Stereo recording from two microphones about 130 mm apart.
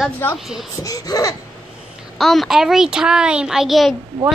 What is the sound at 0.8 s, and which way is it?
Speech, 30° left (ahead or behind).